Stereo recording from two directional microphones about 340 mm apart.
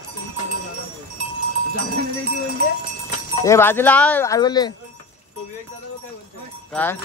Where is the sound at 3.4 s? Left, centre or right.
Centre.